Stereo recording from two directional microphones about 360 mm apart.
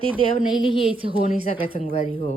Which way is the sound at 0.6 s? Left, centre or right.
Centre.